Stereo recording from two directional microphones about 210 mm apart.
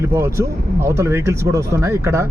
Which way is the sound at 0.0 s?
15° right (ahead or behind).